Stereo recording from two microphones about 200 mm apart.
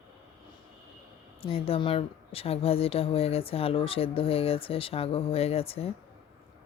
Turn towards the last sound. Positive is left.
turn(degrees=30)  # may be behind; listen again after turning